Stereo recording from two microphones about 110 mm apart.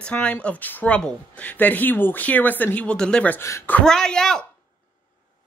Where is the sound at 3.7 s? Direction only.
5° left (ahead or behind).